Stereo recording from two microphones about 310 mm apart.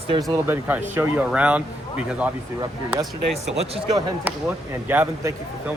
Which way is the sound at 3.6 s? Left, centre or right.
Centre.